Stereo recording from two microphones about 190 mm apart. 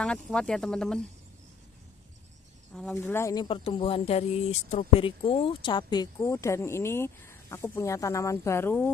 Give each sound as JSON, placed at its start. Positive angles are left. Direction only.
{"t": 0.0, "sound": "speech", "side_deg": 5}
{"t": 2.7, "sound": "speech", "side_deg": 10}